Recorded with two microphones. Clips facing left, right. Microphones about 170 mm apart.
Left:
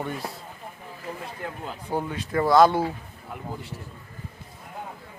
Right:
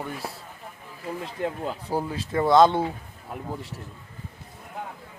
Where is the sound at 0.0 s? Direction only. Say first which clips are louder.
Left 2 dB; 5° right (ahead or behind).